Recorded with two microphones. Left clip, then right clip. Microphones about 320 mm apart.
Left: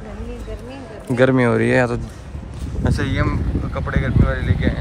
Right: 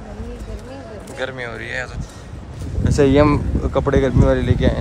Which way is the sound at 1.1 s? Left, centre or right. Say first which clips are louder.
Left 11 dB; centre.